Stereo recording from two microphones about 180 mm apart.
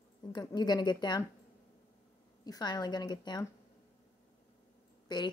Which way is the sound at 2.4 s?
20° left (ahead or behind).